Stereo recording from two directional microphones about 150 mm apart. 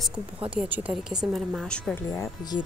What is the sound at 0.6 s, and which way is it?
A woman's voice, 10° right (ahead or behind).